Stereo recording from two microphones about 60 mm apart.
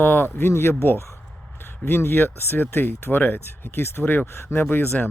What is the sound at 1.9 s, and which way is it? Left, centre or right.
Speech, left.